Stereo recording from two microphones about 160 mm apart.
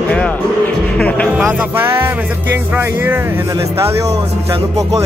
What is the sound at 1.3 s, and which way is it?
Music, 10° right (ahead or behind).